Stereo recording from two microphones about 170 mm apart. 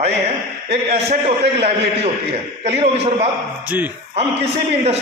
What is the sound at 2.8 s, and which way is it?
Speech, 40° right (ahead or behind).